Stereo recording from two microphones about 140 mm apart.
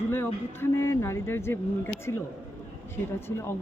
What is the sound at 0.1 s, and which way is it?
A woman's voice, 15° left (ahead or behind).